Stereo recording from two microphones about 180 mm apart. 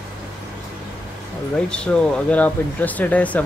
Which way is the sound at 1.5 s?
5° left (ahead or behind).